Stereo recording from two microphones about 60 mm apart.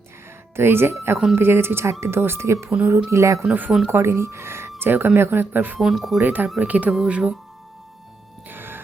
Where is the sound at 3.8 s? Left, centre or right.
Right.